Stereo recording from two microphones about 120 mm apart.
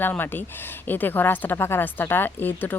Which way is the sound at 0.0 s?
15° left (ahead or behind).